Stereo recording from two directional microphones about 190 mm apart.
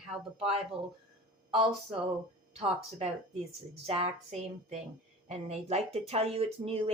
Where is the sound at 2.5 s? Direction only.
35° right (ahead or behind).